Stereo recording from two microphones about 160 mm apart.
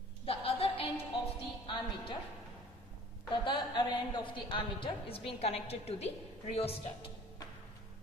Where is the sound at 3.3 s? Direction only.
30° left (ahead or behind).